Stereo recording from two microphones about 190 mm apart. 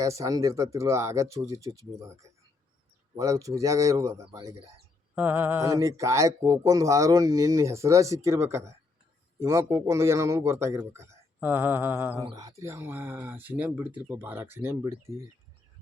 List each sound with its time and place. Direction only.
0.0 s speech: 15° right (ahead or behind)
4.3 s speech: 25° right (ahead or behind)
5.1 s speech: 10° right (ahead or behind)